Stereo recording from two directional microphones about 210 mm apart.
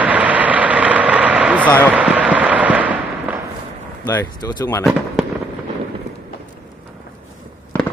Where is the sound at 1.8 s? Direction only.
5° right (ahead or behind).